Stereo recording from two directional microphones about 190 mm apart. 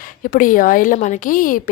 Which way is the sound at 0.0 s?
45° left (ahead or behind).